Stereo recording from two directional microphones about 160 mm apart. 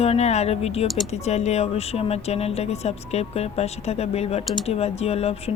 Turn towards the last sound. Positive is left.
turn(degrees=40)  # may be behind; listen again after turning